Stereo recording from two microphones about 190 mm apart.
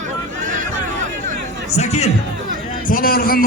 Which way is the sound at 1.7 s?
35° left (ahead or behind).